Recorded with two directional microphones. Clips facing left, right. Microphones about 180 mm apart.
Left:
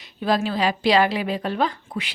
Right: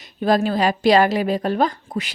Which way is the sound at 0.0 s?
45° right (ahead or behind).